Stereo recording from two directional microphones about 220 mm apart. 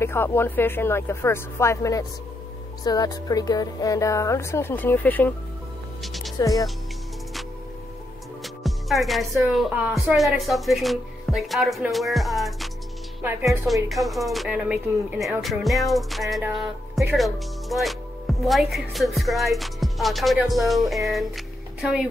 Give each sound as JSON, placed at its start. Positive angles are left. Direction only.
{"t": 0.0, "sound": "speech", "side_deg": 10}
{"t": 6.4, "sound": "speech", "side_deg": 15}
{"t": 8.6, "sound": "music", "side_deg": 0}
{"t": 9.5, "sound": "speech", "side_deg": 0}